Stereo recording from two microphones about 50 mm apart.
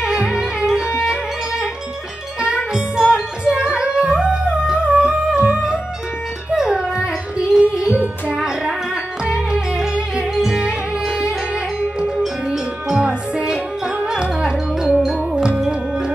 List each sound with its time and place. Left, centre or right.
0.0 s music: centre
12.4 s music: centre
14.9 s music: centre